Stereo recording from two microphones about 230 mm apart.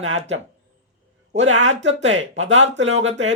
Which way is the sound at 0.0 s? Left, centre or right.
Right.